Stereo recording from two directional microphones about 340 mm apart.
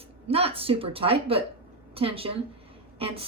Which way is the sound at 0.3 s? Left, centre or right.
Centre.